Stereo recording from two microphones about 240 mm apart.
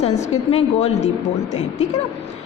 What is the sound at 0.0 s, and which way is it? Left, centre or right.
A woman's voice, left.